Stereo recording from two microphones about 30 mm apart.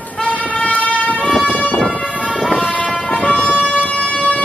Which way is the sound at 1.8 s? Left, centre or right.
Left.